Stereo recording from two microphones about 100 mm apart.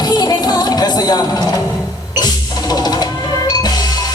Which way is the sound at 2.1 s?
40° left (ahead or behind).